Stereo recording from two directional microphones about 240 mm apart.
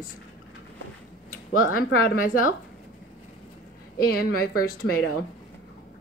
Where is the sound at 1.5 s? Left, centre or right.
Left.